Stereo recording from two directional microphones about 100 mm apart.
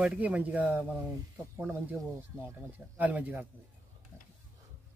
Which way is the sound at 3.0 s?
15° right (ahead or behind).